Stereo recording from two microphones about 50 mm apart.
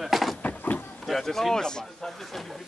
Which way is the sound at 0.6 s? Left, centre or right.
Left.